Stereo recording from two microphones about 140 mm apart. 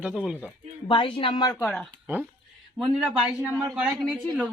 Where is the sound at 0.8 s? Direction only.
35° left (ahead or behind).